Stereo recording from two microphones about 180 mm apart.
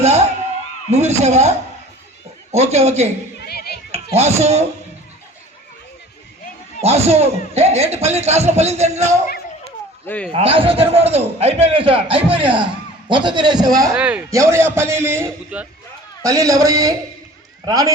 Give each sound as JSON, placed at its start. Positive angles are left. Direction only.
{"t": 0.0, "sound": "a sound", "side_deg": -35}
{"t": 0.9, "sound": "a man's voice", "side_deg": -35}
{"t": 3.4, "sound": "hands", "side_deg": 60}
{"t": 4.1, "sound": "a man's voice", "side_deg": -35}
{"t": 6.8, "sound": "a man's voice", "side_deg": -35}
{"t": 10.1, "sound": "a man's voice", "side_deg": 5}
{"t": 10.3, "sound": "a man's voice", "side_deg": -30}
{"t": 13.9, "sound": "a man's voice", "side_deg": -10}